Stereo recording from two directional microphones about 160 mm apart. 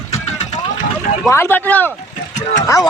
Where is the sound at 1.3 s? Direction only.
15° left (ahead or behind).